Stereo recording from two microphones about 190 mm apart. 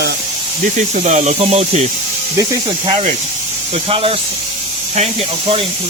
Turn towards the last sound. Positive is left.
turn(degrees=-30)  # may be behind; listen again after turning